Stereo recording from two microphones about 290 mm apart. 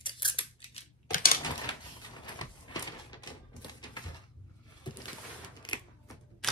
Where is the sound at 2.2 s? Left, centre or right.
Centre.